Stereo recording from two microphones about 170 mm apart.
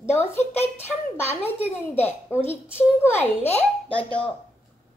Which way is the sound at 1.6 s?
10° left (ahead or behind).